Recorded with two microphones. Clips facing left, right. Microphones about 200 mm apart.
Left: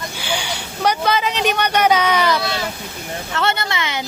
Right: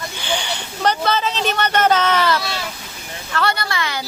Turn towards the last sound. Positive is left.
turn(degrees=20)  # may be behind; listen again after turning